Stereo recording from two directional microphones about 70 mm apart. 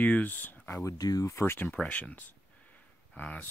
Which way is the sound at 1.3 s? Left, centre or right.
Left.